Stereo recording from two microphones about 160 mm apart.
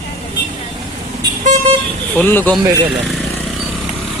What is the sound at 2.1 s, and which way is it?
Speech, 10° left (ahead or behind).